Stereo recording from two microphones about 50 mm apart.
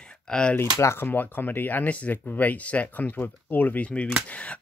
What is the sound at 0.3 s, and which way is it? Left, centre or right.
Speech, centre.